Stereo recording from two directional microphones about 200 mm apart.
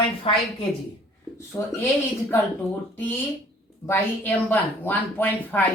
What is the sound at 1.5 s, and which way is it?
Speech, 15° left (ahead or behind).